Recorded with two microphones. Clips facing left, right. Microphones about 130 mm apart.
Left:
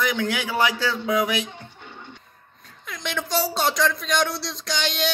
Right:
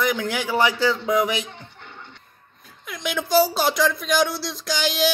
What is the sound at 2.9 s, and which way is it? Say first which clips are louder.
Speech: right 4 dB; centre (ahead or behind).